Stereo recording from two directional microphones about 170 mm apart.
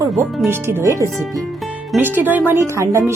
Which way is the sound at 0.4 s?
15° right (ahead or behind).